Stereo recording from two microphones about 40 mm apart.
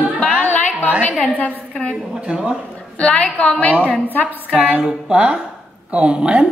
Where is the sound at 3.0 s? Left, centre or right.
Left.